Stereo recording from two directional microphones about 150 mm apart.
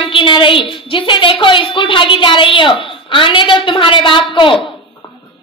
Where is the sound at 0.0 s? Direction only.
35° left (ahead or behind).